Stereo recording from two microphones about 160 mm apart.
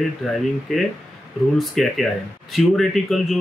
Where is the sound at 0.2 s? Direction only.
Centre (ahead or behind).